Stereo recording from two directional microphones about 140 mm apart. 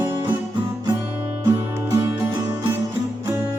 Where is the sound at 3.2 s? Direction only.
20° right (ahead or behind).